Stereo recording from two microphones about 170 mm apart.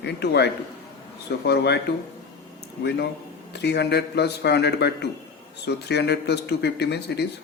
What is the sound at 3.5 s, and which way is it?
Speech, 80° left.